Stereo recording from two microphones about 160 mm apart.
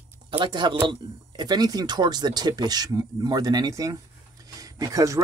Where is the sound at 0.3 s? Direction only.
30° right (ahead or behind).